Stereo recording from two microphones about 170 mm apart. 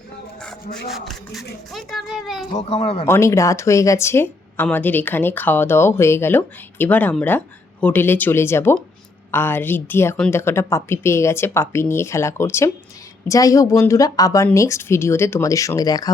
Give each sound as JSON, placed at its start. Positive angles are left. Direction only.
{"t": 0.9, "sound": "a child's voice", "side_deg": 0}
{"t": 2.6, "sound": "speech", "side_deg": 35}
{"t": 3.1, "sound": "speech", "side_deg": 15}